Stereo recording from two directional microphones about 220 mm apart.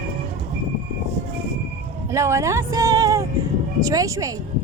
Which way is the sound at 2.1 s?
15° right (ahead or behind).